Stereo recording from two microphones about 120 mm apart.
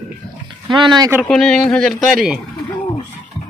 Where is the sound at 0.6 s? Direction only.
40° right (ahead or behind).